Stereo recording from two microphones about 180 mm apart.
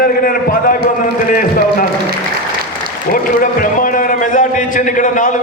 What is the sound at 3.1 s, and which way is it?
A man's voice, 50° left (ahead or behind).